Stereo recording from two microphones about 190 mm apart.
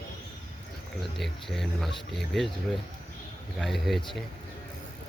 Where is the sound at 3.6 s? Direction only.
Centre (ahead or behind).